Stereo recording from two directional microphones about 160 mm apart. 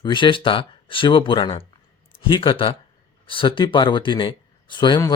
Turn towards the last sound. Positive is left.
turn(degrees=25)  # may be behind; listen again after turning